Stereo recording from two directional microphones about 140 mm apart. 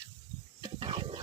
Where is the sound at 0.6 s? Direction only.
40° right (ahead or behind).